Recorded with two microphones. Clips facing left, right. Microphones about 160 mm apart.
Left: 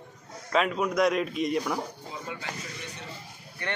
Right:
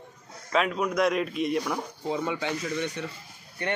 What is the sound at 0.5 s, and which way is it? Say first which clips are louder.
A man's voice: even; centre (ahead or behind).